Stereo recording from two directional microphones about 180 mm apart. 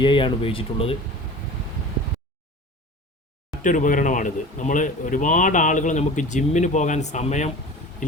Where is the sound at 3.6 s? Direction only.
45° left (ahead or behind).